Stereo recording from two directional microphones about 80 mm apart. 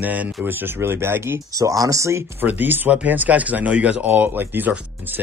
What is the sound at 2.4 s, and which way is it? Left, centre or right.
Speech, right.